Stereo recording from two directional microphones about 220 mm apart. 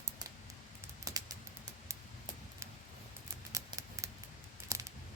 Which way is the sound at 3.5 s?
15° right (ahead or behind).